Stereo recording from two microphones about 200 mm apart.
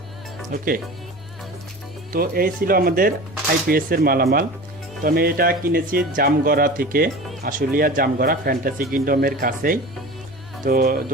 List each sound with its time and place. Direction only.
0.5 s speech: 45° right (ahead or behind)
2.1 s speech: 45° right (ahead or behind)